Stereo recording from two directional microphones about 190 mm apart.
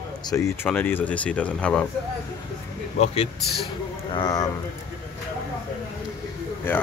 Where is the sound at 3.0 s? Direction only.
30° left (ahead or behind).